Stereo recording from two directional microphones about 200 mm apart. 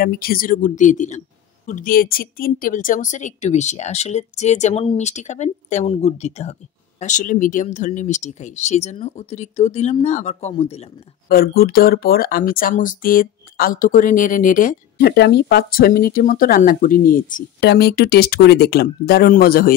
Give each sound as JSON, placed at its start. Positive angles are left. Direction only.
{"t": 0.0, "sound": "speech", "side_deg": 50}
{"t": 11.2, "sound": "speech", "side_deg": 50}
{"t": 15.0, "sound": "speech", "side_deg": 55}